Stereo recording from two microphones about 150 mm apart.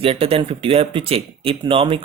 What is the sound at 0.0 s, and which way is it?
Speech, 40° right (ahead or behind).